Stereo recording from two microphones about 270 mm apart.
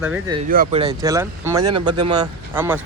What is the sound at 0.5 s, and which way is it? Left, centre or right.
Speech, right.